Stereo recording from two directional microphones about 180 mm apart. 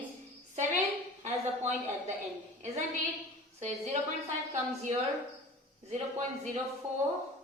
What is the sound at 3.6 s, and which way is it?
Speech, 35° right (ahead or behind).